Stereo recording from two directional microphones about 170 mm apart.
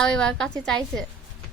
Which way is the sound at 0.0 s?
5° left (ahead or behind).